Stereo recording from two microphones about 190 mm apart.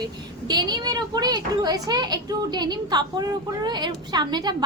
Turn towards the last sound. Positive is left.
turn(degrees=-20)  # may be behind; listen again after turning